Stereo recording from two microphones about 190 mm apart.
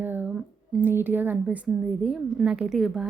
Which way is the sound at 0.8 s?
10° right (ahead or behind).